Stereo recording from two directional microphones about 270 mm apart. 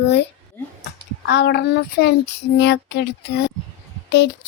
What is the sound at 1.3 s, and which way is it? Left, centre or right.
Speech, left.